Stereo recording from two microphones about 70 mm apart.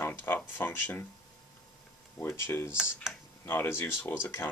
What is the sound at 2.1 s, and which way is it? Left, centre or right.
Speech, left.